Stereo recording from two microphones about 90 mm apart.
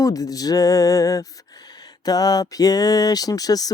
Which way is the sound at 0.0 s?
40° left (ahead or behind).